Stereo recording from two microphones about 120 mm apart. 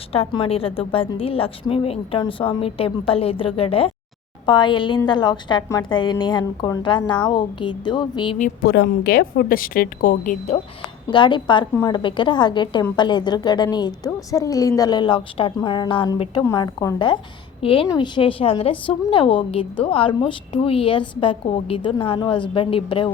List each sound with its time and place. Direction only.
0.1 s a woman's voice: 55° left (ahead or behind)
4.4 s a woman's voice: 40° left (ahead or behind)
10.2 s speech: 65° left (ahead or behind)
11.1 s a woman's voice: 40° left (ahead or behind)
16.6 s a woman's voice: 35° left (ahead or behind)
17.6 s a woman's voice: 50° left (ahead or behind)